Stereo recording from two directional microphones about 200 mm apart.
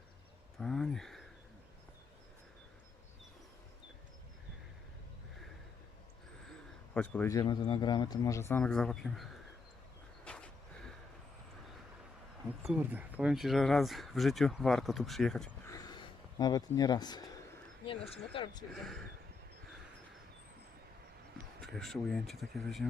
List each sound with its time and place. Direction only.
0.6 s speech: centre (ahead or behind)
6.9 s a man's voice: 5° left (ahead or behind)
10.2 s a sound: 5° left (ahead or behind)
12.6 s speech: 5° right (ahead or behind)
15.6 s a sound: 15° left (ahead or behind)
17.8 s speech: 30° left (ahead or behind)
18.7 s speech: centre (ahead or behind)
21.6 s speech: centre (ahead or behind)